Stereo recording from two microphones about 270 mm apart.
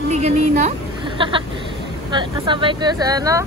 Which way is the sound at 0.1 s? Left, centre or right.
Right.